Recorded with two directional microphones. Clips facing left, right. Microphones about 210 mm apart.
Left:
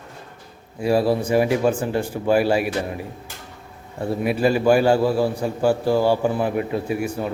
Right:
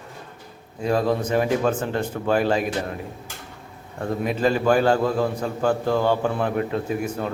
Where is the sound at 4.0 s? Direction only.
10° left (ahead or behind).